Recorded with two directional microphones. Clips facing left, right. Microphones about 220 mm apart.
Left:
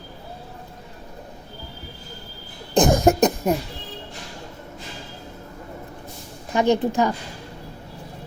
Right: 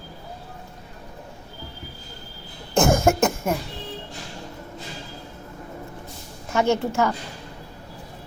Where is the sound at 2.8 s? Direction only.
20° left (ahead or behind).